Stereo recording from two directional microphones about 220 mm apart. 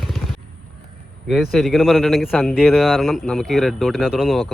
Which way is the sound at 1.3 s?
Centre (ahead or behind).